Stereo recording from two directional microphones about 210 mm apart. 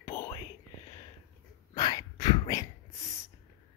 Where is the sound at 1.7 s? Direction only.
20° left (ahead or behind).